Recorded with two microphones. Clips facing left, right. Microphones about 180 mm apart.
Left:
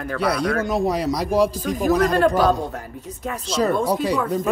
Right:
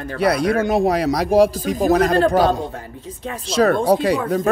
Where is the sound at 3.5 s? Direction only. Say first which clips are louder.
Right 5 dB; 70° right (ahead or behind).